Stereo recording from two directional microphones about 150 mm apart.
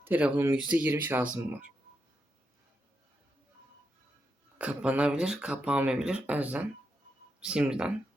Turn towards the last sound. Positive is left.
turn(degrees=-5)  # may be behind; listen again after turning